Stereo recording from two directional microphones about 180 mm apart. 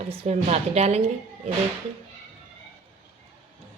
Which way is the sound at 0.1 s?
35° right (ahead or behind).